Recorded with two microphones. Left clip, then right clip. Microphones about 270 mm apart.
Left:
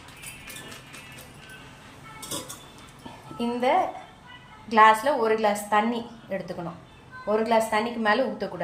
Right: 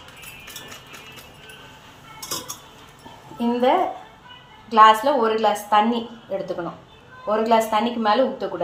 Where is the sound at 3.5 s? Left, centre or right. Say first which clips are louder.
Right 4 dB; left.